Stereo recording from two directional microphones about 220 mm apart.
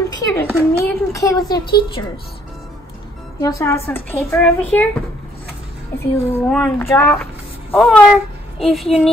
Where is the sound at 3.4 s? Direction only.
15° left (ahead or behind).